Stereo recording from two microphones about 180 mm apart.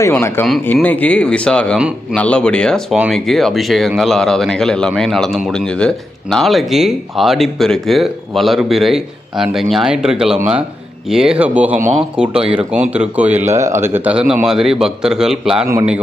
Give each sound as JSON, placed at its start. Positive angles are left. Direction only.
{"t": 0.0, "sound": "speech", "side_deg": 15}
{"t": 13.4, "sound": "speech", "side_deg": -40}
{"t": 13.7, "sound": "speech", "side_deg": -15}